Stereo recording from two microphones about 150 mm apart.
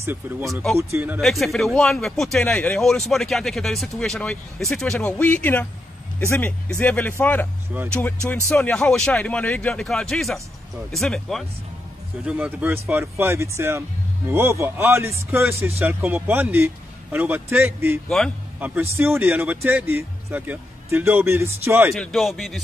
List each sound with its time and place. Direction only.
0.0 s speech: 15° right (ahead or behind)
1.2 s speech: centre (ahead or behind)
8.5 s speech: 10° left (ahead or behind)
12.3 s speech: 10° right (ahead or behind)
18.0 s speech: 5° left (ahead or behind)
18.6 s speech: 15° right (ahead or behind)
21.9 s speech: centre (ahead or behind)